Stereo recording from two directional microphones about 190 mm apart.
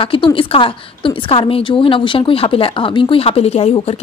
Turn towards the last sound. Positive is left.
turn(degrees=30)  # may be behind; listen again after turning